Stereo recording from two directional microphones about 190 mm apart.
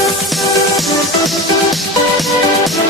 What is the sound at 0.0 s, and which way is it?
Music, centre (ahead or behind).